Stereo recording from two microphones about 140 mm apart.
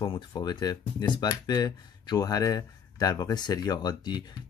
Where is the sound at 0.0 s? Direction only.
35° left (ahead or behind).